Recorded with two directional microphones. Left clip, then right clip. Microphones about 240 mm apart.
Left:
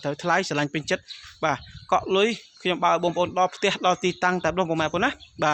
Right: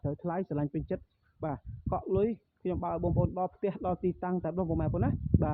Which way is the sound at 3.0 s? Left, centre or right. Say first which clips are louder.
Left 9 dB; left.